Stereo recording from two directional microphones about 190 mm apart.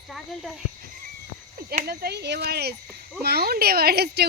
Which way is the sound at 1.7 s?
50° right (ahead or behind).